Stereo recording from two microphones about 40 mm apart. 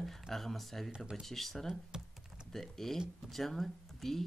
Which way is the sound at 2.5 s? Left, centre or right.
Centre.